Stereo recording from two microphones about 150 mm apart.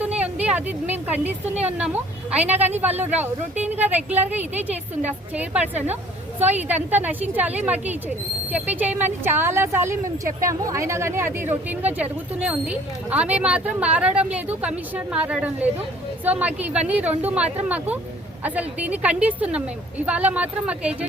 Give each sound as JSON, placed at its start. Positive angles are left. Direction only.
{"t": 0.4, "sound": "speech", "side_deg": -10}